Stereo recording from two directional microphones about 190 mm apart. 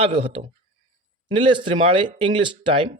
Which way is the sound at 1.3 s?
25° right (ahead or behind).